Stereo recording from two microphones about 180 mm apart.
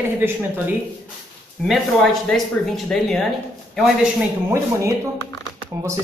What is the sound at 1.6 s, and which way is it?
Speech, centre (ahead or behind).